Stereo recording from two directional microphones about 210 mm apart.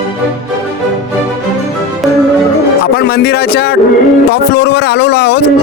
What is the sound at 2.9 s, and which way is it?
A man's voice, 50° left (ahead or behind).